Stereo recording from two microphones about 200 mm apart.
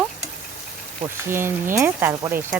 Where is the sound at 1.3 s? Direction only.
10° right (ahead or behind).